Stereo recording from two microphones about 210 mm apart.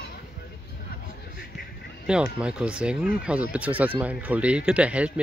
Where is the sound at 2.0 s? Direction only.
5° right (ahead or behind).